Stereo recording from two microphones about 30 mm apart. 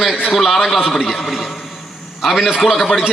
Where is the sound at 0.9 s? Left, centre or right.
Centre.